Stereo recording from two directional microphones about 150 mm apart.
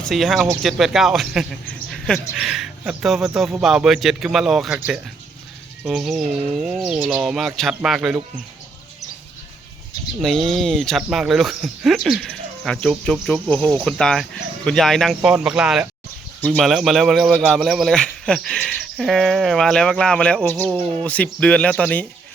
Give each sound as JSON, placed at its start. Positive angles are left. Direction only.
{"t": 0.0, "sound": "speech", "side_deg": 0}
{"t": 1.6, "sound": "a sound", "side_deg": 5}
{"t": 2.3, "sound": "speech", "side_deg": 0}
{"t": 10.2, "sound": "speech", "side_deg": 0}